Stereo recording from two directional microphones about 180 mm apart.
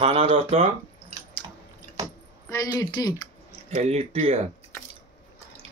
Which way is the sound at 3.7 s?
35° right (ahead or behind).